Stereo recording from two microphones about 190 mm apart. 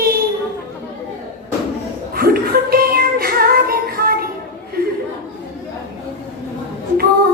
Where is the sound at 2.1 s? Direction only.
55° right (ahead or behind).